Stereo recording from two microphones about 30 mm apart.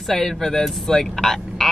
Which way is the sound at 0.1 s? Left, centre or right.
Centre.